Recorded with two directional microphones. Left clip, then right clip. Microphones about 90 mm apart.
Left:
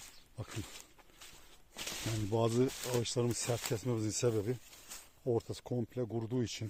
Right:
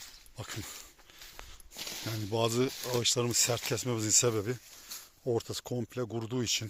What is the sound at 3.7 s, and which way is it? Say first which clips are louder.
Speech: right 7 dB; 5° right (ahead or behind).